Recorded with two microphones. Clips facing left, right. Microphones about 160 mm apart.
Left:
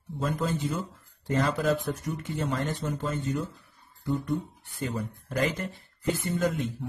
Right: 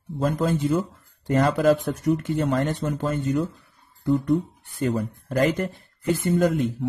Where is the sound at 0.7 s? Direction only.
60° right (ahead or behind).